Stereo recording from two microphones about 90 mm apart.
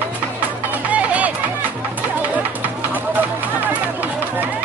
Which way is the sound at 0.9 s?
15° right (ahead or behind).